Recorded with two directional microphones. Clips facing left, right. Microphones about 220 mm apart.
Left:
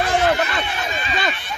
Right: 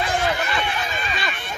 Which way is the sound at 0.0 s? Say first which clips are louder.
Left 5 dB; 50° left (ahead or behind).